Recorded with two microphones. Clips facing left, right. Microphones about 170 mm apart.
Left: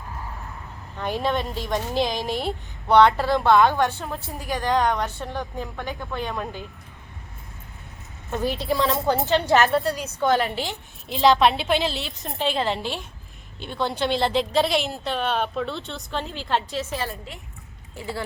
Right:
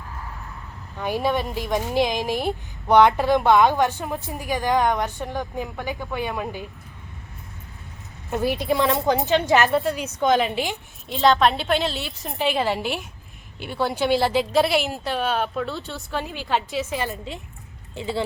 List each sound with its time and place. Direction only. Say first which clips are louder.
0.9 s a woman's voice: right 2 dB; 10° right (ahead or behind)
8.3 s a woman's voice: right 2 dB; 10° right (ahead or behind)
11.1 s a woman's voice: even; centre (ahead or behind); by 18.2 s 25° right (ahead or behind)